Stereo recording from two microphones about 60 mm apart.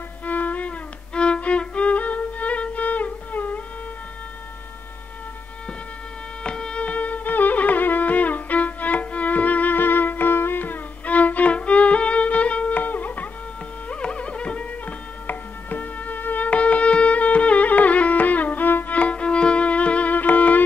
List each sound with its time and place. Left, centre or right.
0.2 s violin: left
6.4 s music: centre; by 18.9 s left
18.9 s violin: left